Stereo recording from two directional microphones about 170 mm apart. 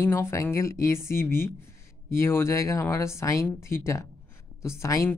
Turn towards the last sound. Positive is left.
turn(degrees=15)  # may be behind; listen again after turning